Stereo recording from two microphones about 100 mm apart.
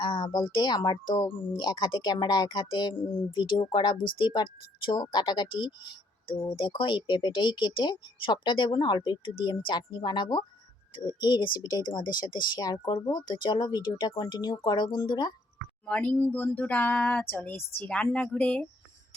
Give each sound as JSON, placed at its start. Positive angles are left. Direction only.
{"t": 0.0, "sound": "speech", "side_deg": 50}
{"t": 15.9, "sound": "speech", "side_deg": 10}